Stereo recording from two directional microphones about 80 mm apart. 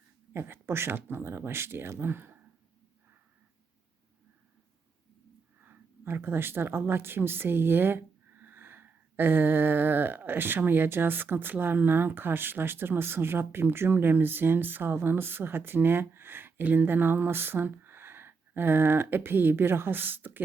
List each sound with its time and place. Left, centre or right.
0.3 s speech: right
5.6 s speech: right